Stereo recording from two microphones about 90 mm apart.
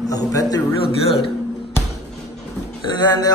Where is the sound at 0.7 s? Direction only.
85° left.